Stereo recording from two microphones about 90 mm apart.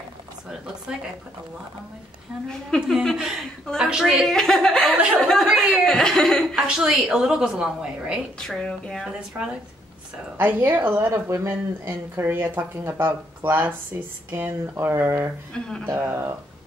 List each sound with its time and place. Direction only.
2.8 s a woman's voice: centre (ahead or behind)
6.5 s a woman's voice: 10° right (ahead or behind)
8.4 s speech: 10° left (ahead or behind)
10.3 s speech: 25° right (ahead or behind)
15.5 s speech: 10° left (ahead or behind)
16.0 s speech: 30° right (ahead or behind)